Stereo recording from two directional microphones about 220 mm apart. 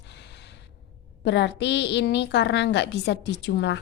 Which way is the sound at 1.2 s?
50° left (ahead or behind).